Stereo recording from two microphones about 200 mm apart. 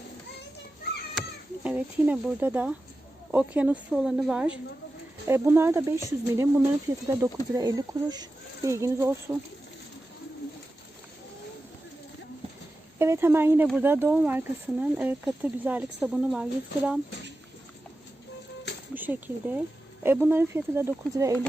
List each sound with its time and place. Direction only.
1.6 s a woman's voice: 5° right (ahead or behind)
13.0 s speech: 10° right (ahead or behind)
18.9 s speech: 10° right (ahead or behind)